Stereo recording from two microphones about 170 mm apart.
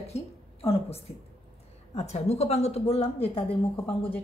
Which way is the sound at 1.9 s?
40° left (ahead or behind).